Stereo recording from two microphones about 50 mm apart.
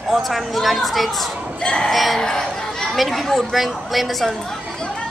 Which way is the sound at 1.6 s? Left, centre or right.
Centre.